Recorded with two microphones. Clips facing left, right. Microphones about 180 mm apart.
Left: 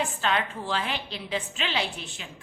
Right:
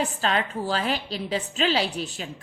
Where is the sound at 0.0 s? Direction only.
35° right (ahead or behind).